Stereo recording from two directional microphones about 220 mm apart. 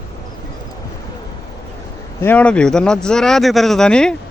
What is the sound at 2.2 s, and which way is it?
Speech, 5° left (ahead or behind).